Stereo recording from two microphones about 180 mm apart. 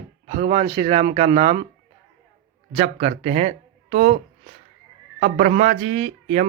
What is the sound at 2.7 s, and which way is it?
Speech, 35° right (ahead or behind).